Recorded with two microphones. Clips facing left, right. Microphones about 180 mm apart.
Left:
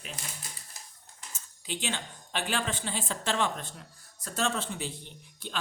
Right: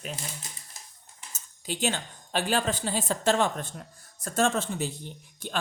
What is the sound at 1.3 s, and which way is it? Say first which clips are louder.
Speech: right 3 dB; 40° right (ahead or behind).